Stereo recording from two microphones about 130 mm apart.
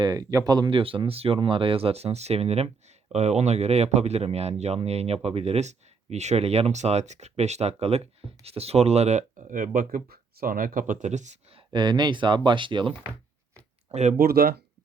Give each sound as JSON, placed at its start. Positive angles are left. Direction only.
{"t": 0.0, "sound": "speech", "side_deg": -25}
{"t": 0.8, "sound": "speech", "side_deg": -45}
{"t": 11.5, "sound": "speech", "side_deg": -35}
{"t": 13.9, "sound": "speech", "side_deg": -65}